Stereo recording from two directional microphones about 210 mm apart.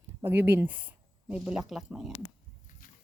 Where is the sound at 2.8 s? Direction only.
40° left (ahead or behind).